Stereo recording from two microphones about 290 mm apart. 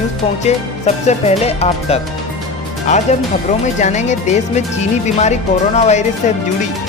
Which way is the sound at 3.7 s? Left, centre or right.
Left.